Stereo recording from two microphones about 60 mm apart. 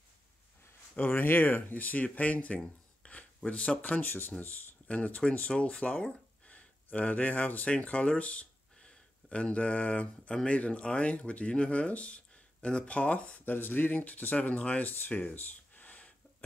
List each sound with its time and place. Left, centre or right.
0.9 s speech: left
13.6 s speech: left